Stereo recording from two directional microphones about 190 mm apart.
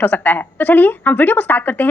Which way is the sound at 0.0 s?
10° left (ahead or behind).